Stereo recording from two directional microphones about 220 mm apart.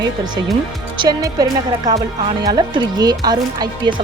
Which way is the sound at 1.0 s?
15° right (ahead or behind).